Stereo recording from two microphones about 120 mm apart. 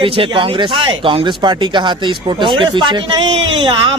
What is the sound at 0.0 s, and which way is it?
Speech, 45° right (ahead or behind).